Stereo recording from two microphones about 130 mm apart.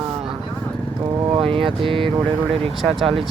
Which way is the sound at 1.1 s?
30° right (ahead or behind).